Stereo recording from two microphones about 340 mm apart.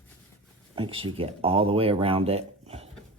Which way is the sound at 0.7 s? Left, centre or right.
Centre.